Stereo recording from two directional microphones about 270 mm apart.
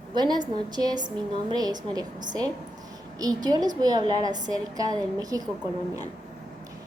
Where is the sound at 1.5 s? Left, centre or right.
Centre.